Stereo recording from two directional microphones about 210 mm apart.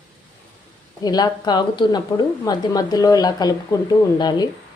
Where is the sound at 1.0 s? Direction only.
20° left (ahead or behind).